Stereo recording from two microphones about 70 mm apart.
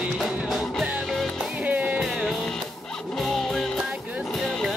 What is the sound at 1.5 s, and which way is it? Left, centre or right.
Music, right.